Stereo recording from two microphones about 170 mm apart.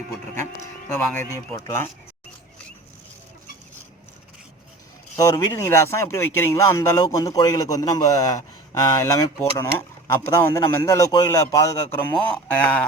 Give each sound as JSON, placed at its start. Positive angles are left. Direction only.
{"t": 0.9, "sound": "speech", "side_deg": 15}
{"t": 5.1, "sound": "speech", "side_deg": 20}
{"t": 12.1, "sound": "speech", "side_deg": 5}